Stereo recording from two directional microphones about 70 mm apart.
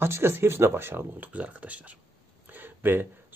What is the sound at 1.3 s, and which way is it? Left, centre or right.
Speech, right.